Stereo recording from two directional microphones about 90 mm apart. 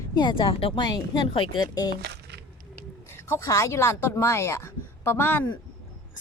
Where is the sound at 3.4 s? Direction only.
35° left (ahead or behind).